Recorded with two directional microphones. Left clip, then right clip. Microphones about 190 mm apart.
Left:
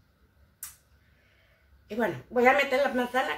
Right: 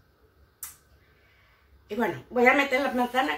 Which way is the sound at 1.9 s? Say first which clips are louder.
Right 1 dB; 5° right (ahead or behind).